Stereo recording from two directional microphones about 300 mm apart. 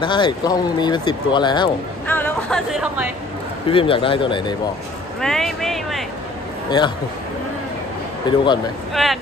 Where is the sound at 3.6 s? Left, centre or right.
Centre.